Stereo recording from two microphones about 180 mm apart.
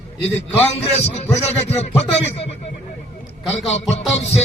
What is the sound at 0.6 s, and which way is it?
A man's voice, 35° left (ahead or behind).